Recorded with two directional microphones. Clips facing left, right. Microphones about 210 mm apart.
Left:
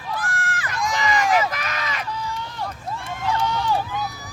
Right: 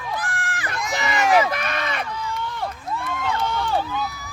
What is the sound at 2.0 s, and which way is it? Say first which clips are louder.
Run: right 1 dB; 55° right (ahead or behind).